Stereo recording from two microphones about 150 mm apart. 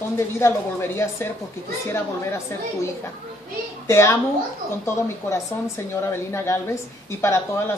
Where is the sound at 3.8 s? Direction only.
20° left (ahead or behind).